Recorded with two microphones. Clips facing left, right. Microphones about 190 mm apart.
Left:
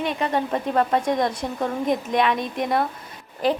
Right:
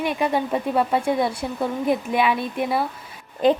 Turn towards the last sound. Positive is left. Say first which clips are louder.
# right 4 dB
turn(degrees=-20)  # may be behind; listen again after turning